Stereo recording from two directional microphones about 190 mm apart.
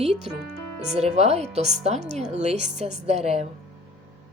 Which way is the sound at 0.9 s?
35° right (ahead or behind).